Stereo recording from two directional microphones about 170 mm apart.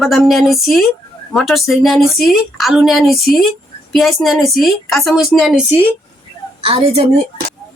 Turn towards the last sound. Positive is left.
turn(degrees=-35)  # may be behind; listen again after turning